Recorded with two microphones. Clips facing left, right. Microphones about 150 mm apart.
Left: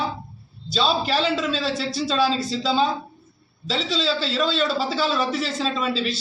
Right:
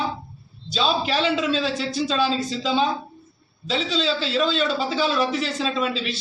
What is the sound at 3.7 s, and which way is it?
A man's voice, centre (ahead or behind).